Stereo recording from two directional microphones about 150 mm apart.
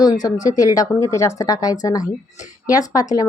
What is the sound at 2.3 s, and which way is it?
Speech, 55° left (ahead or behind).